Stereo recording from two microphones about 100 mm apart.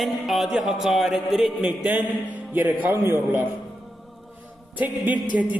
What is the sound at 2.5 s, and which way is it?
Speech, 20° right (ahead or behind).